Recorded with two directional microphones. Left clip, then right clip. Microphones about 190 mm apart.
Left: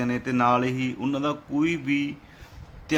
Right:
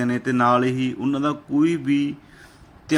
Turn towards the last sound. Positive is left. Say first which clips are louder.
# right 4 dB
turn(degrees=-15)  # may be behind; listen again after turning